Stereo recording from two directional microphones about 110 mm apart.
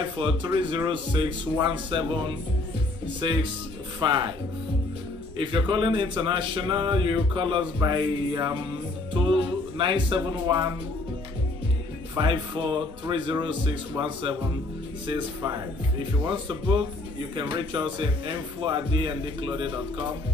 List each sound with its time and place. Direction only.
0.0 s speech: 50° right (ahead or behind)
5.4 s speech: 45° right (ahead or behind)
12.2 s speech: 45° right (ahead or behind)